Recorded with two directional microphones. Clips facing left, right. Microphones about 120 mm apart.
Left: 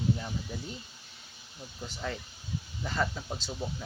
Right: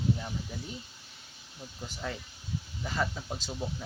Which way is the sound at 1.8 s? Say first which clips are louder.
Left 1 dB; 5° right (ahead or behind).